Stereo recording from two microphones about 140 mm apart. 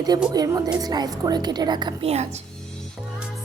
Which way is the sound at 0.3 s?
25° right (ahead or behind).